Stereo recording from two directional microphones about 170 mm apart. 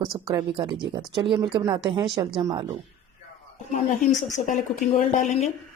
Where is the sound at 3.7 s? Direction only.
50° left (ahead or behind).